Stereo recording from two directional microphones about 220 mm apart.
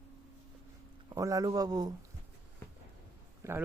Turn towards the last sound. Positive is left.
turn(degrees=-10)  # may be behind; listen again after turning